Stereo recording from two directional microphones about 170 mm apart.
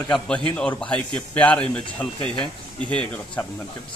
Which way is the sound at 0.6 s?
5° left (ahead or behind).